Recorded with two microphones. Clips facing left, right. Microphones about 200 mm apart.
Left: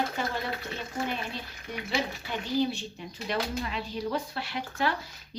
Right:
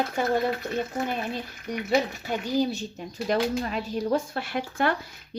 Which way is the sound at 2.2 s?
40° right (ahead or behind).